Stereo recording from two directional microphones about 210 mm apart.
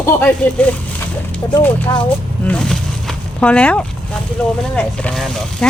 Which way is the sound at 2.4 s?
5° left (ahead or behind).